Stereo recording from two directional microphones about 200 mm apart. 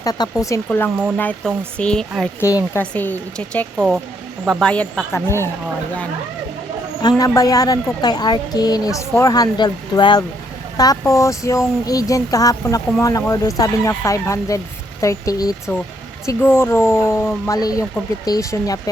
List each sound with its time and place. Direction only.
0.0 s speech: 20° left (ahead or behind)
3.8 s speech: 10° right (ahead or behind)
4.4 s speech: 5° left (ahead or behind)
7.0 s a woman's voice: 15° left (ahead or behind)